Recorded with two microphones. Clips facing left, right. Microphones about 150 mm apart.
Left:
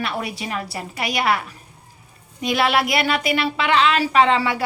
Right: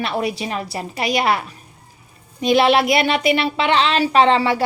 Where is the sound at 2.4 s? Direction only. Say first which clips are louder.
Right 5 dB; 25° right (ahead or behind).